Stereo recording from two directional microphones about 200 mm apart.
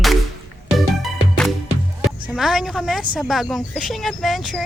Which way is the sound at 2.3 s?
5° right (ahead or behind).